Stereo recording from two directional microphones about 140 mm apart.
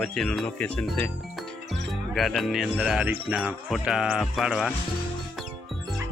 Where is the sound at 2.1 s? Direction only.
Centre (ahead or behind).